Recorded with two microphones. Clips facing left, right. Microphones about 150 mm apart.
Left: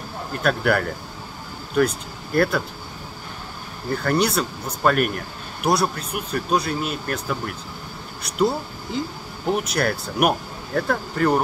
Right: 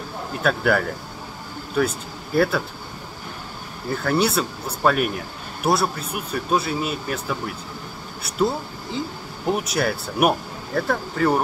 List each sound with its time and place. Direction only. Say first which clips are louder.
0.4 s speech: even; centre (ahead or behind)
3.9 s speech: even; 5° right (ahead or behind)
9.5 s speech: even; 5° right (ahead or behind)